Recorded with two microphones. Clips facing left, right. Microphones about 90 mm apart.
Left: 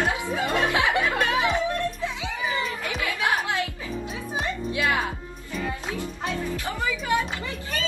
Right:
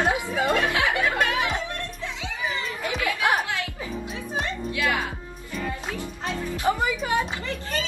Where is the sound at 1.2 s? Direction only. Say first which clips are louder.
Left 2 dB; 25° left (ahead or behind).